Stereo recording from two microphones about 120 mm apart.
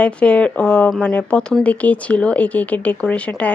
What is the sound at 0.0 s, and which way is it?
Speech, 10° left (ahead or behind).